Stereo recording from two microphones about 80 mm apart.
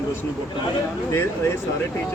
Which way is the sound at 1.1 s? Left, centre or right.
Left.